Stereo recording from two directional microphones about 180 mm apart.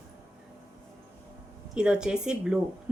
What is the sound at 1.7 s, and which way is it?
Speech, 5° right (ahead or behind).